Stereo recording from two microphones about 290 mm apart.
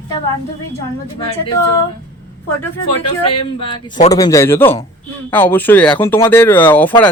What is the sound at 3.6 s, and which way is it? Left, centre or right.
A man's voice, centre.